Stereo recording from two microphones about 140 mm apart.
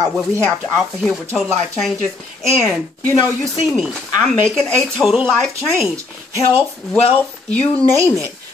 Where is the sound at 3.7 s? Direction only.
Centre (ahead or behind).